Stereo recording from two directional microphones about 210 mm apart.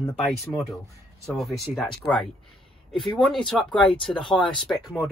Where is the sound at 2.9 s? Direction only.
20° left (ahead or behind).